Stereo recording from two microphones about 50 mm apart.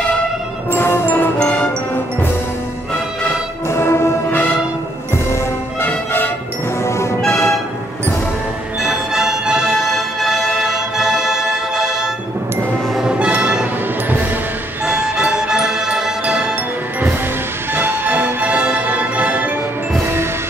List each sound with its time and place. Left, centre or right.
0.7 s music: left
1.4 s music: centre
3.6 s music: left
5.9 s music: left
6.8 s music: left
8.8 s music: centre
9.8 s music: centre
13.2 s music: centre
15.0 s music: centre
17.7 s music: right
18.1 s music: right